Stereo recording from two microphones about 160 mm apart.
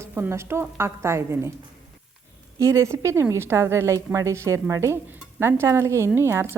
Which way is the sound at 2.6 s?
20° right (ahead or behind).